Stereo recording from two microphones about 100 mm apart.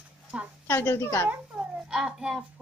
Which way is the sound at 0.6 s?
20° left (ahead or behind).